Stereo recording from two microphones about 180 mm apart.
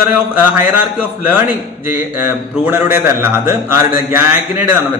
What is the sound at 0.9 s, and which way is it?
A man's voice, 10° right (ahead or behind).